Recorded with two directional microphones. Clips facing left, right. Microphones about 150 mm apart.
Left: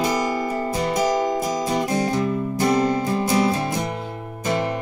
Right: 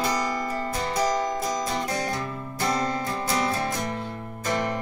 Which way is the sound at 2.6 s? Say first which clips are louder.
Left 6 dB; 15° left (ahead or behind).